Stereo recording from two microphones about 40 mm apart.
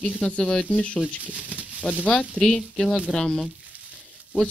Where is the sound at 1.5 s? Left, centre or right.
Right.